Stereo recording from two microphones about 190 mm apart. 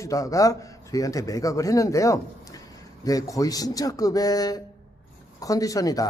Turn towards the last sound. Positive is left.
turn(degrees=20)  # may be behind; listen again after turning